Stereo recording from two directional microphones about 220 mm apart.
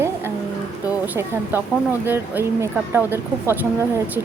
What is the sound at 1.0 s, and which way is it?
Speech, 10° right (ahead or behind).